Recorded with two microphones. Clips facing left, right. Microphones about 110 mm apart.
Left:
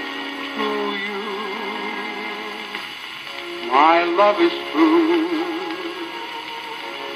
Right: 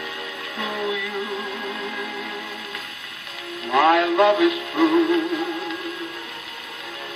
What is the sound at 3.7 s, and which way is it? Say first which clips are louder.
Music: left 3 dB; 55° left (ahead or behind).